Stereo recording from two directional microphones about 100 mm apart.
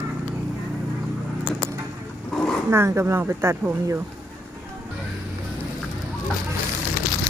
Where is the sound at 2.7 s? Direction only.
30° right (ahead or behind).